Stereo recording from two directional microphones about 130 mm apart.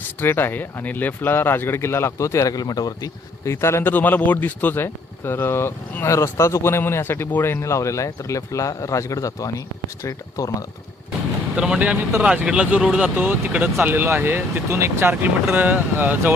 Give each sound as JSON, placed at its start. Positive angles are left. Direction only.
{"t": 0.2, "sound": "speech", "side_deg": 15}
{"t": 11.5, "sound": "speech", "side_deg": -5}